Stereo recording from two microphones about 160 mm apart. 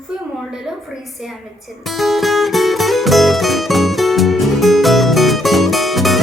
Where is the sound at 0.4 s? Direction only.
Centre (ahead or behind).